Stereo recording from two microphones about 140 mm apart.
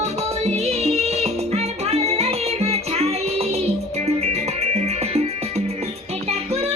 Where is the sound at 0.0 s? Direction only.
50° right (ahead or behind).